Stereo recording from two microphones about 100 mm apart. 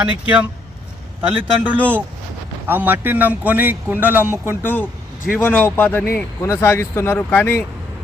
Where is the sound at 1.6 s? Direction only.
15° right (ahead or behind).